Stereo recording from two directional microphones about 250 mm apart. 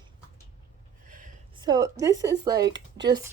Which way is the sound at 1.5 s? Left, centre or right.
Centre.